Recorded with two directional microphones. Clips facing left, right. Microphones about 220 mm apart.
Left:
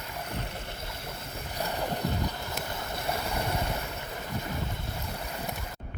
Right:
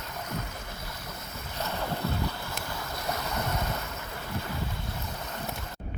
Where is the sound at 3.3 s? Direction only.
10° left (ahead or behind).